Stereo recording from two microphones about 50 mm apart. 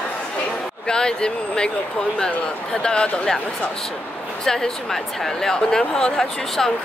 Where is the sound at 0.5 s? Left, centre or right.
Centre.